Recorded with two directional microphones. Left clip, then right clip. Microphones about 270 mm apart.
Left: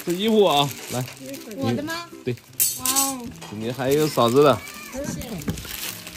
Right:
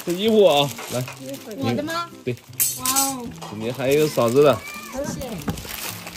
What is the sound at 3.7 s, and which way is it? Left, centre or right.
Speech, centre.